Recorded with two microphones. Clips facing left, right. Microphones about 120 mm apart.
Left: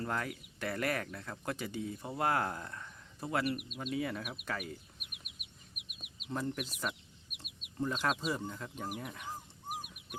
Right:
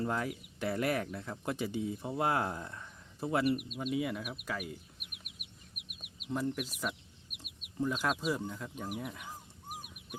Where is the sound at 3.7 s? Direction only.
10° right (ahead or behind).